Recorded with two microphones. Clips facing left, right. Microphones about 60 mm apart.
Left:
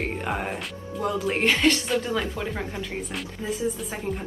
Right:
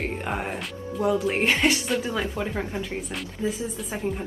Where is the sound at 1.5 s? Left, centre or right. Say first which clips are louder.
Left 3 dB; centre.